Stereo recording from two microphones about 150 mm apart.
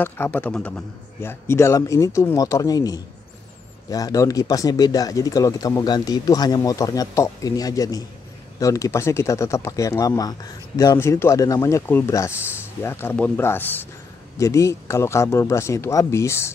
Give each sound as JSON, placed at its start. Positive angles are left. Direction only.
{"t": 0.0, "sound": "speech", "side_deg": 10}